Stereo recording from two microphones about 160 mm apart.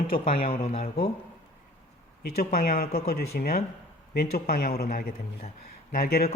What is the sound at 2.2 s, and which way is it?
A man's voice, 70° left (ahead or behind).